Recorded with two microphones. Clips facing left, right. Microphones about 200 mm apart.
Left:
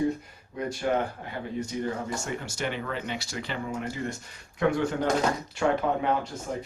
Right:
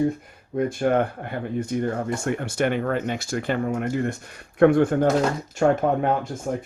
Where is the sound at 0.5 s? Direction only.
50° right (ahead or behind).